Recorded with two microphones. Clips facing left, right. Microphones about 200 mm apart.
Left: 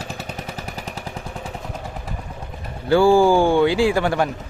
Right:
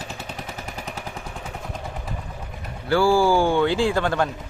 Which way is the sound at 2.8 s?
20° left (ahead or behind).